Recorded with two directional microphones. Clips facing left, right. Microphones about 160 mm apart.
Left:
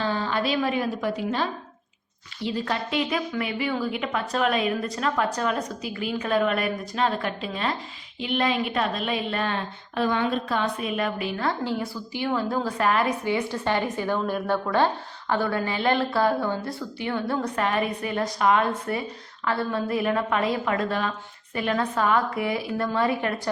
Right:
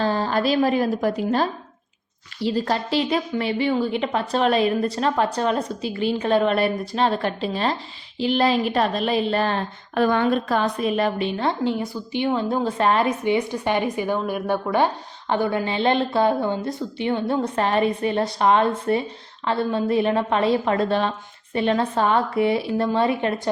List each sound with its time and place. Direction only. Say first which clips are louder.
0.0 s a woman's voice: right 4 dB; 40° right (ahead or behind)
9.9 s a woman's voice: right 5 dB; 55° right (ahead or behind); by 23.4 s 25° right (ahead or behind)